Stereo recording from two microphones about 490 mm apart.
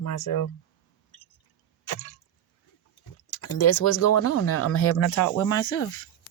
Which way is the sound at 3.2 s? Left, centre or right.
Left.